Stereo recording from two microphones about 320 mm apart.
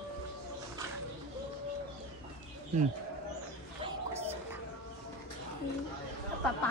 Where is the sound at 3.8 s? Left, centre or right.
Centre.